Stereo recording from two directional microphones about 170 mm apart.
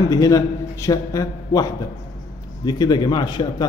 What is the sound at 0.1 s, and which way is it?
A man's voice, 20° left (ahead or behind).